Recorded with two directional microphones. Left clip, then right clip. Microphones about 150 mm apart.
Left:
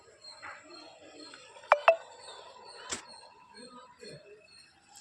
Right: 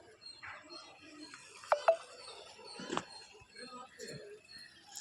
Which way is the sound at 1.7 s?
65° left (ahead or behind).